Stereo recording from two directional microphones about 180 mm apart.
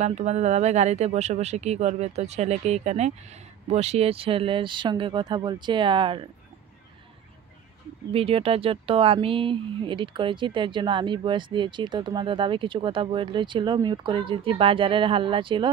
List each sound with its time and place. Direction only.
0.0 s speech: 40° right (ahead or behind)
8.1 s speech: 30° right (ahead or behind)